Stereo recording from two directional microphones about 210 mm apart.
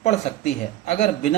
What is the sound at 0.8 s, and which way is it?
Speech, 35° left (ahead or behind).